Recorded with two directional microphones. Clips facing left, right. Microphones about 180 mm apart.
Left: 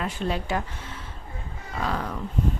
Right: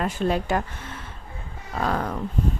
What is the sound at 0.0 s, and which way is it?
Speech, 50° right (ahead or behind).